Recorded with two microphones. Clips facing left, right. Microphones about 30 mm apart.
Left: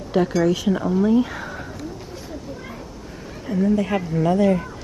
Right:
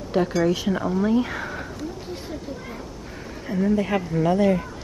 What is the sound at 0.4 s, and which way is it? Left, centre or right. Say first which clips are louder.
Speech: left 2 dB; centre.